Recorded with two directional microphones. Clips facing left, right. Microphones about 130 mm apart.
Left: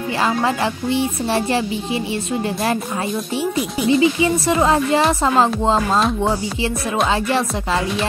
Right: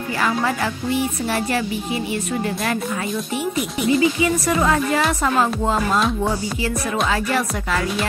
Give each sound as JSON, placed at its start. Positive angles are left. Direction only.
{"t": 0.2, "sound": "a woman's voice", "side_deg": 25}
{"t": 3.5, "sound": "speech", "side_deg": 0}
{"t": 4.0, "sound": "a woman's voice", "side_deg": 25}
{"t": 7.1, "sound": "a woman's voice", "side_deg": 25}